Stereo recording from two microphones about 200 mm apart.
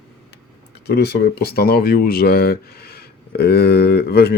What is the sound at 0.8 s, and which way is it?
Speech, 55° left (ahead or behind).